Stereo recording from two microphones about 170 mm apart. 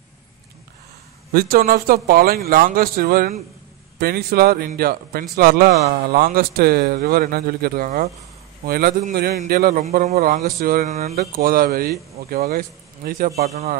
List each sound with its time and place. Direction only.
1.3 s speech: 60° right (ahead or behind)
8.6 s a man's voice: 60° right (ahead or behind)
10.9 s a man's voice: 40° right (ahead or behind)
11.1 s speech: 65° right (ahead or behind)
13.4 s a man's voice: 40° right (ahead or behind)